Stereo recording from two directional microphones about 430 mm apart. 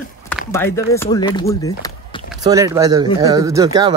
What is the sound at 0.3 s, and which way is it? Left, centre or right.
Speech, centre.